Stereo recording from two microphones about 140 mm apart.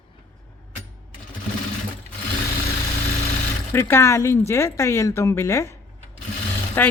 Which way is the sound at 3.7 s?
20° left (ahead or behind).